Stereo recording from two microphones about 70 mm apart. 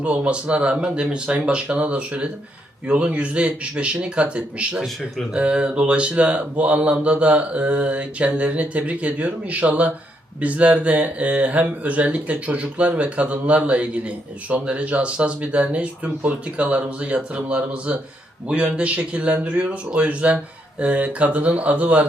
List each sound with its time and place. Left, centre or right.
0.0 s speech: centre